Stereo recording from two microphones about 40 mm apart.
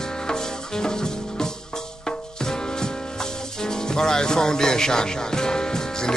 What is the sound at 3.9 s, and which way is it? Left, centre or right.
Music, centre.